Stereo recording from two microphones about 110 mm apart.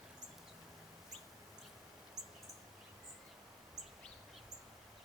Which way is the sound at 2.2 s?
5° right (ahead or behind).